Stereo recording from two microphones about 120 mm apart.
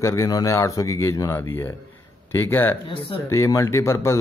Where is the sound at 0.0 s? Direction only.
25° left (ahead or behind).